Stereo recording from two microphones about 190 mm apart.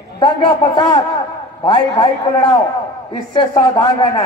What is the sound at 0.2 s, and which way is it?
A man's voice, 25° left (ahead or behind).